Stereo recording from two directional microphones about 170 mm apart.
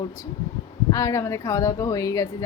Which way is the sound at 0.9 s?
20° left (ahead or behind).